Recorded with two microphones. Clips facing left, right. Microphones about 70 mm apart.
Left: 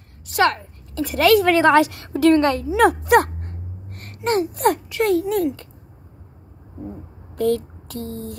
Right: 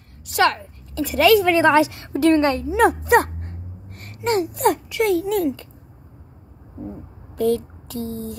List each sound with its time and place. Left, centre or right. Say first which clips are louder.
0.3 s a woman's voice: even; left
3.9 s speech: even; left
7.3 s speech: even; left